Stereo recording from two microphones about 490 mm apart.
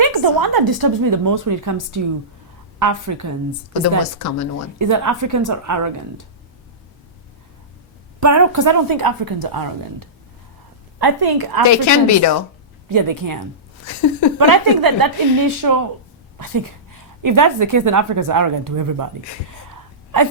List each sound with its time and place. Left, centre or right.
0.0 s a woman's voice: right
3.8 s a woman's voice: left
4.8 s a woman's voice: right
8.2 s speech: right
11.6 s a woman's voice: left
12.9 s a woman's voice: right
13.8 s a woman's voice: left
14.3 s a woman's voice: right